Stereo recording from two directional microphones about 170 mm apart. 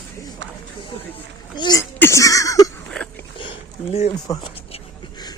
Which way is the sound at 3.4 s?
35° left (ahead or behind).